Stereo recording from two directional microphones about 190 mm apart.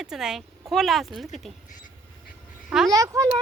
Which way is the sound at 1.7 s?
45° left (ahead or behind).